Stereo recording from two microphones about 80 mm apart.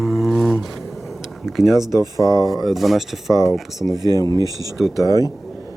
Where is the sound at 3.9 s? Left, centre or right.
Right.